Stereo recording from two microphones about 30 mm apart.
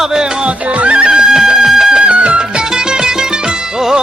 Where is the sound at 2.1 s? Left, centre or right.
Right.